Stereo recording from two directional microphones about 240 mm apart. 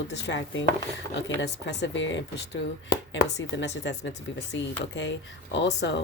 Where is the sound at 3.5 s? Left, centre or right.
Left.